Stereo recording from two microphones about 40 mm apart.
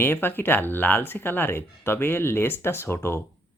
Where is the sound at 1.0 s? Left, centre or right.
Left.